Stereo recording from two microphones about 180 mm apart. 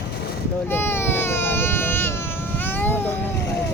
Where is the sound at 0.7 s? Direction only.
10° left (ahead or behind).